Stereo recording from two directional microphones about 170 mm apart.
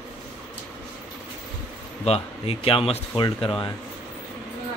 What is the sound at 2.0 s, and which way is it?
Speech, 35° left (ahead or behind).